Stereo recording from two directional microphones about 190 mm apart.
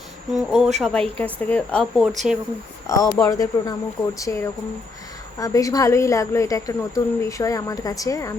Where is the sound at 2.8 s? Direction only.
15° left (ahead or behind).